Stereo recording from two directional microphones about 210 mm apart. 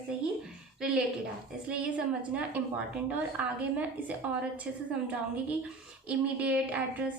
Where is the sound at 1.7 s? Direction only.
5° right (ahead or behind).